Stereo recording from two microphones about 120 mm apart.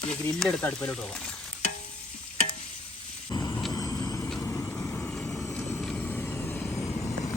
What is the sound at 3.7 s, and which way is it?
Vehicle, 30° left (ahead or behind).